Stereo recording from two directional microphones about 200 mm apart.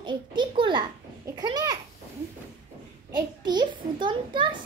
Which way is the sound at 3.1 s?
20° right (ahead or behind).